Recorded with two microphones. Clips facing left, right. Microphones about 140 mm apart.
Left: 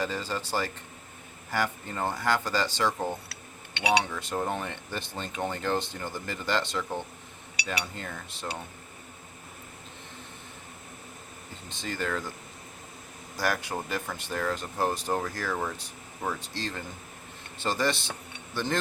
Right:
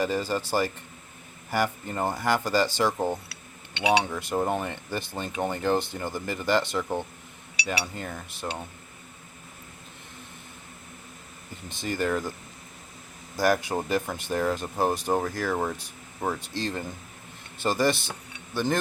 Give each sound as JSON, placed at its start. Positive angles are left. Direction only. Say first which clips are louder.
{"t": 0.0, "sound": "speech", "louder": "right 5 dB", "side_deg": -10}
{"t": 4.1, "sound": "speech", "louder": "right 4 dB", "side_deg": -10}
{"t": 11.8, "sound": "speech", "louder": "right 5 dB", "side_deg": -10}
{"t": 13.3, "sound": "speech", "louder": "right 6 dB", "side_deg": -15}